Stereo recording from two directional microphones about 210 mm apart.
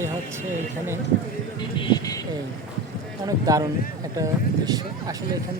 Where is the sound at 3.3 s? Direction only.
15° right (ahead or behind).